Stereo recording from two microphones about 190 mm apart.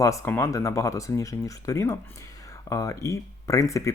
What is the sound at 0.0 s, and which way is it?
Speech, 15° left (ahead or behind).